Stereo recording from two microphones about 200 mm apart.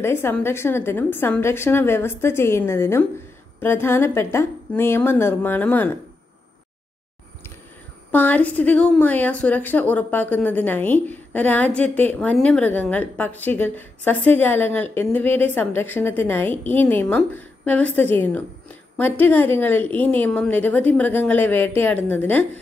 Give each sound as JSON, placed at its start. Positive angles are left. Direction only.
{"t": 0.0, "sound": "a woman's voice", "side_deg": 10}
{"t": 8.1, "sound": "a woman's voice", "side_deg": 10}